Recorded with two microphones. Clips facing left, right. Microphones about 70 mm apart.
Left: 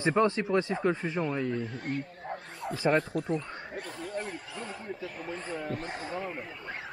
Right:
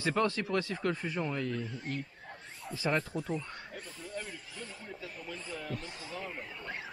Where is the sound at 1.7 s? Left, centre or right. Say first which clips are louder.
Left 4 dB; left.